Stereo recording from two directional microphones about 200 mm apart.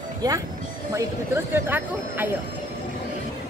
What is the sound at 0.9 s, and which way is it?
Speech, 10° right (ahead or behind).